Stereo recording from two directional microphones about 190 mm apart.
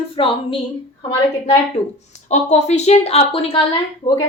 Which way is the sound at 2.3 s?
35° left (ahead or behind).